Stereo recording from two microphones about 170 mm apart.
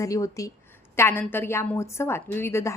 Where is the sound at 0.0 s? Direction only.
20° left (ahead or behind).